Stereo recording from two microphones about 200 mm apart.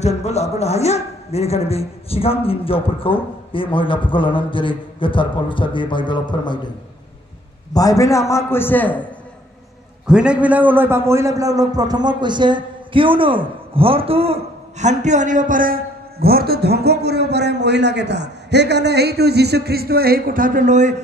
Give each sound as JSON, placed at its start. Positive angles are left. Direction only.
{"t": 0.0, "sound": "a man's voice", "side_deg": 35}
{"t": 7.7, "sound": "a man's voice", "side_deg": 15}
{"t": 10.0, "sound": "a man's voice", "side_deg": -5}